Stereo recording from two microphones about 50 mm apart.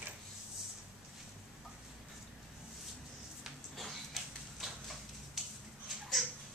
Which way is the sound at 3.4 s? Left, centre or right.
Centre.